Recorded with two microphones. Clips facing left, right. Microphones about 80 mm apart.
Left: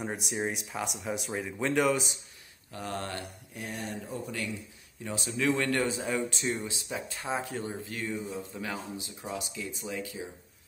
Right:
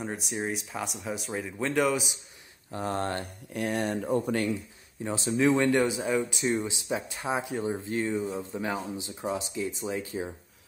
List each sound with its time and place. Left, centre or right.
0.0 s speech: centre
2.7 s speech: right
3.5 s speech: right
5.0 s speech: right
5.9 s speech: centre
6.4 s speech: right